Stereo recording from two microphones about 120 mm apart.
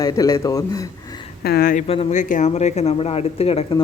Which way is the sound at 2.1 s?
90° left.